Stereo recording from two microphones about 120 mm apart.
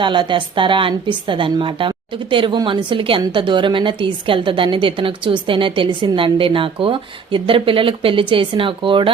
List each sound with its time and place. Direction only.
0.0 s a woman's voice: 40° right (ahead or behind)